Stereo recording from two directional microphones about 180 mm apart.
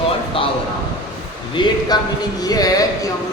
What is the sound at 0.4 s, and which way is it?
Speech, 30° left (ahead or behind).